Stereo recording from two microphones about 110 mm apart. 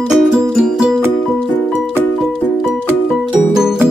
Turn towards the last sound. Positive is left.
turn(degrees=-5)  # may be behind; listen again after turning